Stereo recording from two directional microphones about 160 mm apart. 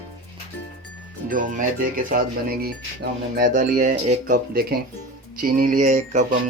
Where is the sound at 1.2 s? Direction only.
60° right (ahead or behind).